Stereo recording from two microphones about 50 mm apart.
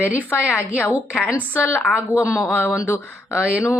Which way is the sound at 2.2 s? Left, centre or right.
Left.